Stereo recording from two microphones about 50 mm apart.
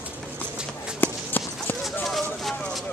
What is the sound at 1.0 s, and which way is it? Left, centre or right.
Clip-clop, left.